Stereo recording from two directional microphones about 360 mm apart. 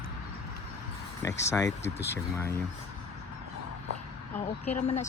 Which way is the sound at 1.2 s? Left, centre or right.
Centre.